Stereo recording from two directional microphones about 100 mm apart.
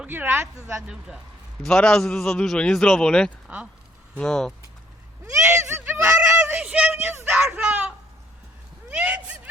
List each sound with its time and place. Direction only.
0.0 s speech: 20° right (ahead or behind)
0.8 s speech: 5° right (ahead or behind)
1.6 s a man's voice: 10° left (ahead or behind)
3.4 s speech: 10° right (ahead or behind)
4.2 s a man's voice: 5° left (ahead or behind)
5.2 s a sound: 25° right (ahead or behind)